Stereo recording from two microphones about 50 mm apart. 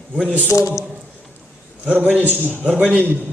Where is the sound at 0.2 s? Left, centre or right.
Right.